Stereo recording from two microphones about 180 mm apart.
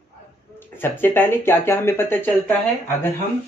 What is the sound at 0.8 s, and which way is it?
Speech, 10° left (ahead or behind).